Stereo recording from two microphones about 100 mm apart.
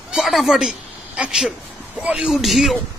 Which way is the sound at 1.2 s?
10° right (ahead or behind).